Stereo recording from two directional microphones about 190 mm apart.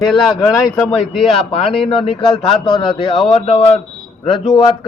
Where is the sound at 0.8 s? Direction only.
Centre (ahead or behind).